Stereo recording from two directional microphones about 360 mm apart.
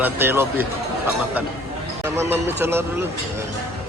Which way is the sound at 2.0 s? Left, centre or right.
Centre.